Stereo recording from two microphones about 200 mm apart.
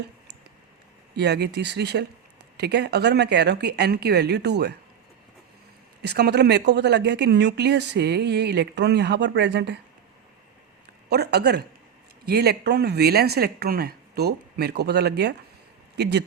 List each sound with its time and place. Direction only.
1.1 s speech: 55° right (ahead or behind)
6.0 s speech: 55° right (ahead or behind)
11.1 s speech: 55° right (ahead or behind)